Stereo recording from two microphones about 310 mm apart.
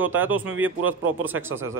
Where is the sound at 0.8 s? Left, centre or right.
Right.